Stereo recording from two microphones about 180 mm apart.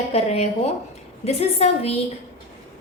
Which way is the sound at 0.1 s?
35° left (ahead or behind).